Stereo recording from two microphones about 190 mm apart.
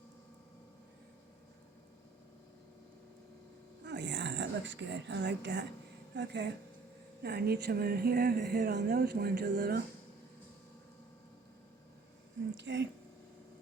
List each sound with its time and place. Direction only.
3.8 s speech: 65° right (ahead or behind)
12.5 s speech: 75° right (ahead or behind)